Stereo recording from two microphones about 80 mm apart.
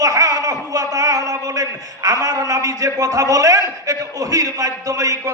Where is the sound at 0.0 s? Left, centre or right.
Right.